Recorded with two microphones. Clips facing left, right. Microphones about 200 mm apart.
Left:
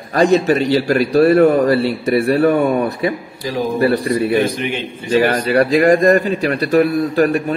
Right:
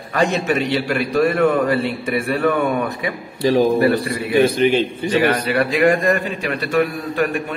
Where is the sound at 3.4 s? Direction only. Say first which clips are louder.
Right 6 dB; 30° right (ahead or behind).